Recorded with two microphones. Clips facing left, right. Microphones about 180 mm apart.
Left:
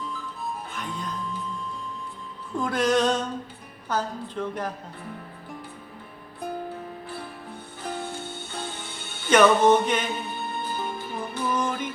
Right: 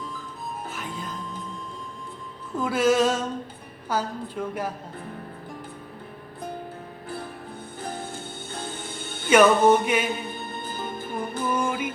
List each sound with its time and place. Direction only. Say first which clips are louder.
0.7 s music: left 1 dB; 5° right (ahead or behind)
2.6 s music: right 2 dB; 5° right (ahead or behind)
3.8 s a woman's voice: right 1 dB; 10° right (ahead or behind)
9.3 s a woman's voice: right 1 dB; 10° right (ahead or behind)
10.6 s music: left 1 dB; 50° right (ahead or behind)
11.5 s a woman's voice: right 1 dB; 10° right (ahead or behind)